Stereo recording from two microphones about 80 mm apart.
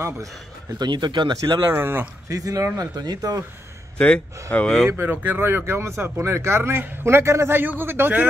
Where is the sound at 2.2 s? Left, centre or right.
Right.